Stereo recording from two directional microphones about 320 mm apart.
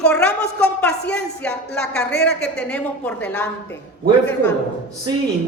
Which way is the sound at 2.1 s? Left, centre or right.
Left.